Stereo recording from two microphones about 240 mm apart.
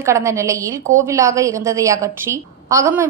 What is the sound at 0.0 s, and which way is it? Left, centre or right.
A woman's voice, centre.